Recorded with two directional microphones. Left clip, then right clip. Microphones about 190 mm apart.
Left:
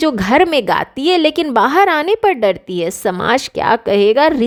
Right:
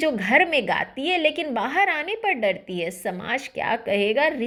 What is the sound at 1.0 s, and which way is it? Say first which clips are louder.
Speech: left 9 dB; 85° left.